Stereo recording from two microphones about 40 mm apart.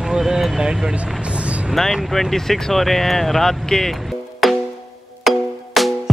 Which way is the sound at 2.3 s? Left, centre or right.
Centre.